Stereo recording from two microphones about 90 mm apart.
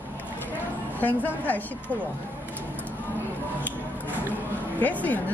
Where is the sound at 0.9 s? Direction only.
20° left (ahead or behind).